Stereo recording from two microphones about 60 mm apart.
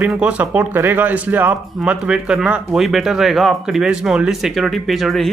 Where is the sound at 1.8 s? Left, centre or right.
Centre.